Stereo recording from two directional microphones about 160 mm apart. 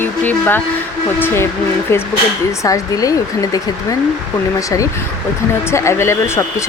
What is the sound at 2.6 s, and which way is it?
A woman's voice, 20° left (ahead or behind).